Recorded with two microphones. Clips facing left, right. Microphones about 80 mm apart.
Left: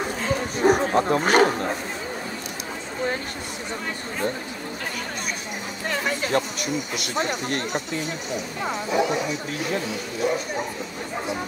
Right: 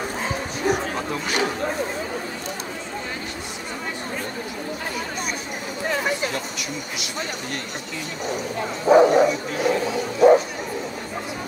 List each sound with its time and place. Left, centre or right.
0.7 s speech: left
7.0 s speech: left
8.8 s speech: right
10.2 s bow-wow: right